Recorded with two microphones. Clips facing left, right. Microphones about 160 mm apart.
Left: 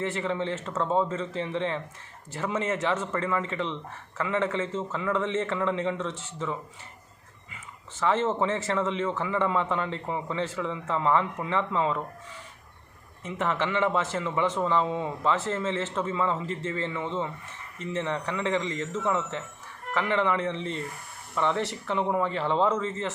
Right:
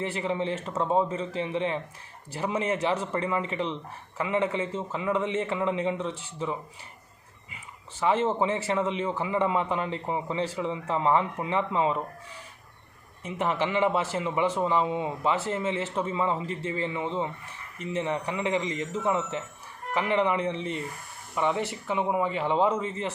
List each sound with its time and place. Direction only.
0.0 s speech: 15° right (ahead or behind)
13.2 s speech: 15° right (ahead or behind)